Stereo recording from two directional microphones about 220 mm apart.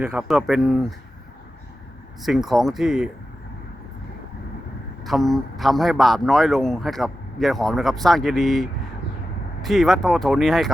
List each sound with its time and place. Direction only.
0.0 s speech: 5° right (ahead or behind)
2.2 s speech: centre (ahead or behind)
5.0 s speech: centre (ahead or behind)